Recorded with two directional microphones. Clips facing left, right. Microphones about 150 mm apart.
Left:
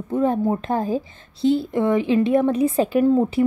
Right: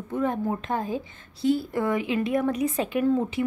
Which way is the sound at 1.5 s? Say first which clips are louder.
Left 5 dB; 25° left (ahead or behind).